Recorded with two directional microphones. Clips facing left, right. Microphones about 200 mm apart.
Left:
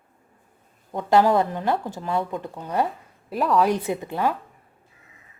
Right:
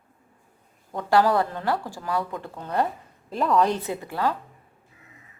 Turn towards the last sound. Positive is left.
turn(degrees=15)  # may be behind; listen again after turning